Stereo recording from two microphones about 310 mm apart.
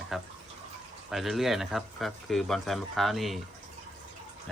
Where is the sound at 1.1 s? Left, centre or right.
Centre.